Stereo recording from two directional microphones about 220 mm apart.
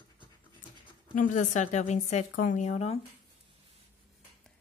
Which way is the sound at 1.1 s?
35° left (ahead or behind).